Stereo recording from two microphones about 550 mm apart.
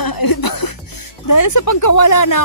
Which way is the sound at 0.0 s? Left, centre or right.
Left.